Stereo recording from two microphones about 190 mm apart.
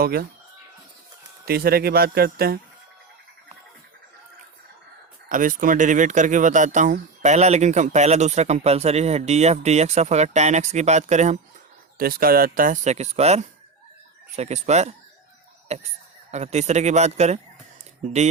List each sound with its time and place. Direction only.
0.0 s speech: 55° right (ahead or behind)
1.5 s speech: 55° right (ahead or behind)
5.3 s speech: 45° right (ahead or behind)
11.9 s speech: 50° right (ahead or behind)